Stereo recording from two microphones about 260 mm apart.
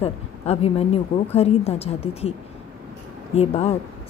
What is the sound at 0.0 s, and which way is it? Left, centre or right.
A woman's voice, left.